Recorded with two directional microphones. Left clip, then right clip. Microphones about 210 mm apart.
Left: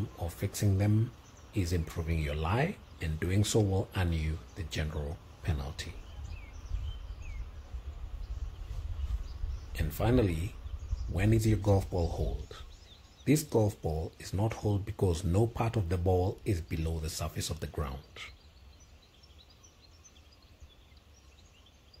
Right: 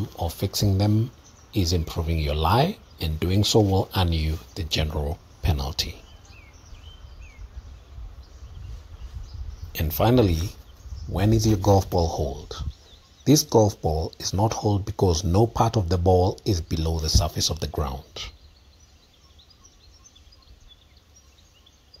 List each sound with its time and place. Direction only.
0.2 s speech: 15° right (ahead or behind)
9.7 s speech: 30° right (ahead or behind)